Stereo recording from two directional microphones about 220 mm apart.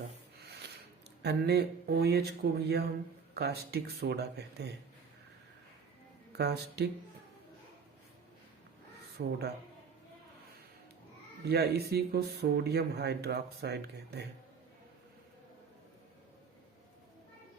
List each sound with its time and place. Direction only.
1.2 s speech: 45° right (ahead or behind)
6.3 s speech: 50° right (ahead or behind)
9.2 s speech: 50° right (ahead or behind)
11.4 s speech: 45° right (ahead or behind)